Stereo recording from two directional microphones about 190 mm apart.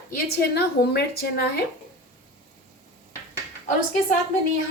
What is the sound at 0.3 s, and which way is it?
A woman's voice, 60° left (ahead or behind).